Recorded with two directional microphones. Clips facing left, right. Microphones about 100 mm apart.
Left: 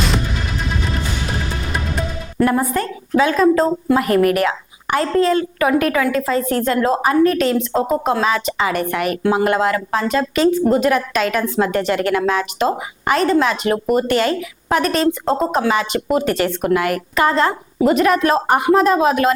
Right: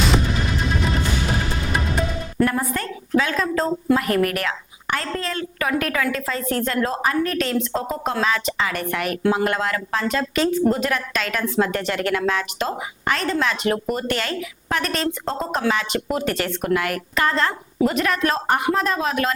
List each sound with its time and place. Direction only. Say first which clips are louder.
2.4 s a woman's voice: left 5 dB; 15° left (ahead or behind)